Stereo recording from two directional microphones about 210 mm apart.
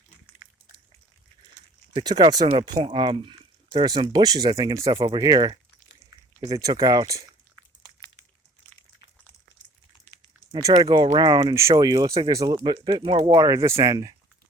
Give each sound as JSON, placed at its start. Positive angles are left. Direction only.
{"t": 1.9, "sound": "speech", "side_deg": -20}
{"t": 10.5, "sound": "speech", "side_deg": -15}